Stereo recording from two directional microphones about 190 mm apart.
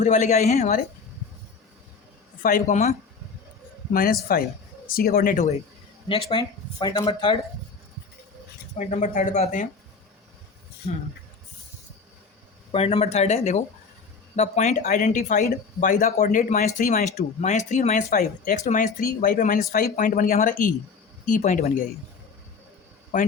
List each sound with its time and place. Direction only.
0.0 s speech: 40° left (ahead or behind)
2.4 s speech: 45° left (ahead or behind)
3.9 s speech: 50° left (ahead or behind)
6.1 s speech: 25° left (ahead or behind)
8.8 s speech: 40° left (ahead or behind)
12.7 s speech: 30° left (ahead or behind)
23.1 s speech: 40° left (ahead or behind)